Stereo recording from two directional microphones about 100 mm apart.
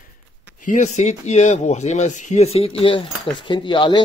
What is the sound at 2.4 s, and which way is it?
Speech, 85° left.